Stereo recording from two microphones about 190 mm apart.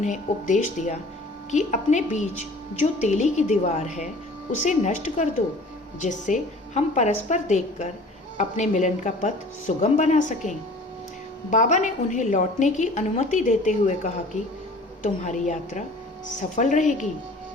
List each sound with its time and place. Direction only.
0.0 s a woman's voice: 40° left (ahead or behind)
11.5 s a woman's voice: 40° left (ahead or behind)